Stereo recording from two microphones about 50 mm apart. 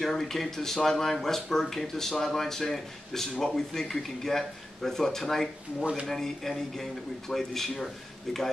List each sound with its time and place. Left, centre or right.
0.0 s speech: centre